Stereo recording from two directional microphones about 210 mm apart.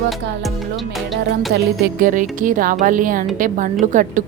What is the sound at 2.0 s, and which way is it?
A woman's voice, 40° right (ahead or behind).